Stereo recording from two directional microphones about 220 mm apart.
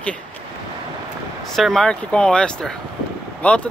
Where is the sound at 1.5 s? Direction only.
Centre (ahead or behind).